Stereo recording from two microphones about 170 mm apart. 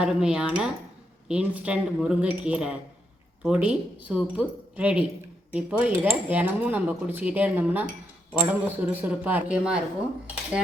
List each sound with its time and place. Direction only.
0.0 s speech: 5° right (ahead or behind)